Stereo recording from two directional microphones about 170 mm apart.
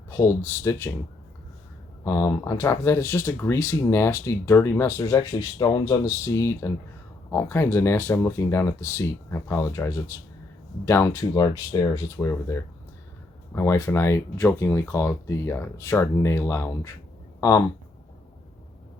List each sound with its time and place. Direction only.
0.1 s speech: 15° left (ahead or behind)
2.0 s speech: 20° left (ahead or behind)